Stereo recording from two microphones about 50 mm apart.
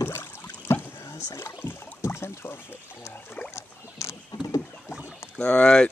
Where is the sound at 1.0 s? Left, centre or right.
Left.